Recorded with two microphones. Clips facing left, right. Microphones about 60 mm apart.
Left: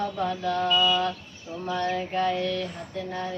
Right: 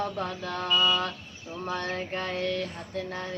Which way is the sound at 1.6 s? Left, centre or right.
Right.